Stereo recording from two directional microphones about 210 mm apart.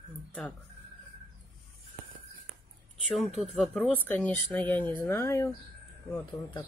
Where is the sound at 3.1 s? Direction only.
Centre (ahead or behind).